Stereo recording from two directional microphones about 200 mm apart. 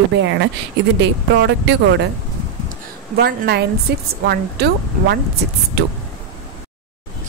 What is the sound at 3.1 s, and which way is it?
Speech, 50° right (ahead or behind).